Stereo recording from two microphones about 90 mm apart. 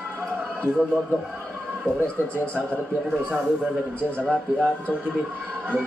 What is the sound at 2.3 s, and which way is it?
Speech, 25° right (ahead or behind).